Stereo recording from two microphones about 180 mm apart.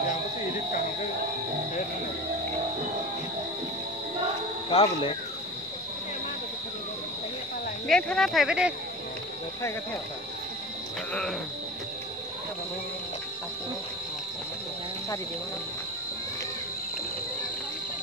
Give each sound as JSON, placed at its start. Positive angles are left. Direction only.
{"t": 4.7, "sound": "cricket", "side_deg": 30}
{"t": 7.9, "sound": "speech", "side_deg": 5}